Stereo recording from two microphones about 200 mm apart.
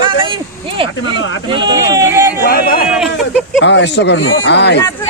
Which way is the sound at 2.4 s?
50° left (ahead or behind).